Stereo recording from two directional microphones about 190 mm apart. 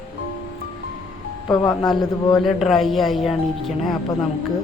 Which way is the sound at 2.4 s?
Centre (ahead or behind).